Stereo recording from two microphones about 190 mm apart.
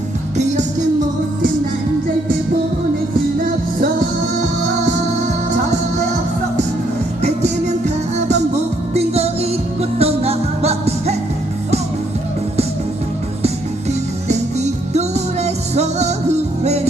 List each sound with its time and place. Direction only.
0.3 s music: 40° right (ahead or behind)
7.2 s music: 35° right (ahead or behind)
14.3 s music: 35° right (ahead or behind)